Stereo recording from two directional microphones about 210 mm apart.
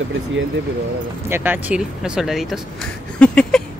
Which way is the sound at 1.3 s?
10° right (ahead or behind).